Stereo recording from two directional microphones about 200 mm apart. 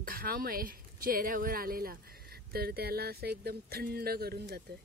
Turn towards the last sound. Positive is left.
turn(degrees=-50)  # may be behind; listen again after turning